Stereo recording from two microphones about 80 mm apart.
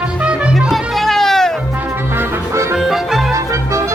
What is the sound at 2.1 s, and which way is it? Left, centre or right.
Music, right.